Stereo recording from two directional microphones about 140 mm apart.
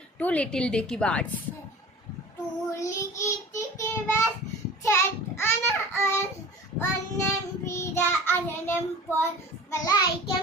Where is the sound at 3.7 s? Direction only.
20° left (ahead or behind).